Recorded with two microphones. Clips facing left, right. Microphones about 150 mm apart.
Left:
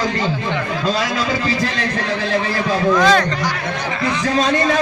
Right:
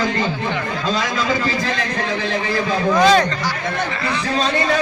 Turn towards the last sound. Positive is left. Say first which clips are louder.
# right 1 dB
turn(degrees=-20)  # may be behind; listen again after turning